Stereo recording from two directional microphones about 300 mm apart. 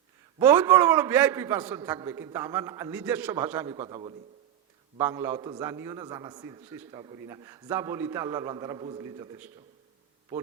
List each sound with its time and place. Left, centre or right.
0.3 s a man's voice: centre